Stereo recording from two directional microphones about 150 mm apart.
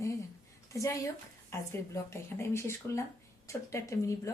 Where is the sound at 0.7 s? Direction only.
20° left (ahead or behind).